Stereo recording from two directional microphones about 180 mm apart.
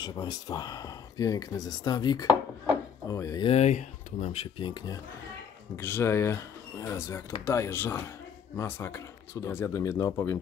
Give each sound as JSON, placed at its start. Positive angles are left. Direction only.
{"t": 0.0, "sound": "speech", "side_deg": 20}
{"t": 3.4, "sound": "speech", "side_deg": 35}
{"t": 5.8, "sound": "speech", "side_deg": 15}